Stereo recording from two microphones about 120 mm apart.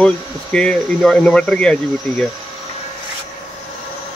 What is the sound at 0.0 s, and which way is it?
Speech, 10° left (ahead or behind).